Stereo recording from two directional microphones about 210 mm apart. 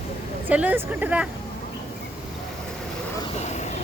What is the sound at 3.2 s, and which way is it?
Vehicle, 30° left (ahead or behind).